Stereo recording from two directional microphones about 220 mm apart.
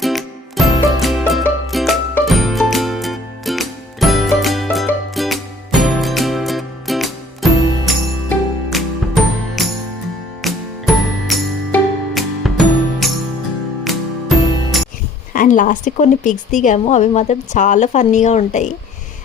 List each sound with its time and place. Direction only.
0.0 s music: centre (ahead or behind)
15.3 s speech: 35° left (ahead or behind)